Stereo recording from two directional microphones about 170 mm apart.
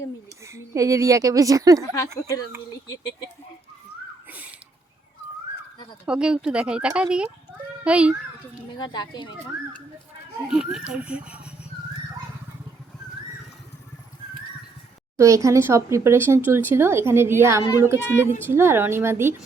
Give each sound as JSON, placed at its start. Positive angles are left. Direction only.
{"t": 0.4, "sound": "speech", "side_deg": -15}
{"t": 1.8, "sound": "speech", "side_deg": 20}
{"t": 4.3, "sound": "a sound", "side_deg": -10}
{"t": 6.1, "sound": "speech", "side_deg": -5}
{"t": 8.8, "sound": "speech", "side_deg": 25}
{"t": 10.5, "sound": "speech", "side_deg": -5}
{"t": 15.2, "sound": "speech", "side_deg": -20}